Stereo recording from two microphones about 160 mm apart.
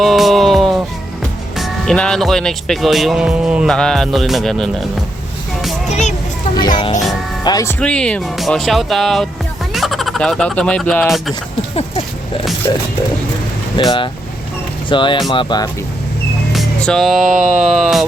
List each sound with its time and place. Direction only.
0.0 s music: centre (ahead or behind)
1.5 s speech: centre (ahead or behind)
6.5 s a child's voice: 25° left (ahead or behind)
7.8 s speech: 5° left (ahead or behind)
12.7 s speech: 25° left (ahead or behind)
16.5 s music: centre (ahead or behind)
17.3 s a sound: 50° right (ahead or behind)
17.6 s speech: 5° right (ahead or behind)